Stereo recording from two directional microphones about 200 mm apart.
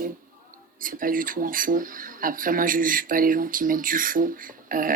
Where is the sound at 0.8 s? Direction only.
45° right (ahead or behind).